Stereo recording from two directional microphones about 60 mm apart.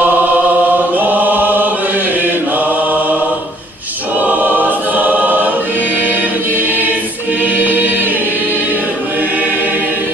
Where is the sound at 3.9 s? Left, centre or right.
Right.